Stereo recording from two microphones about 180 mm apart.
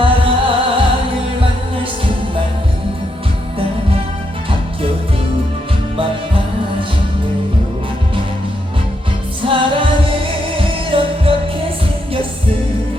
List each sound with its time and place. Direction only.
0.0 s music: 30° right (ahead or behind)
9.4 s music: 30° right (ahead or behind)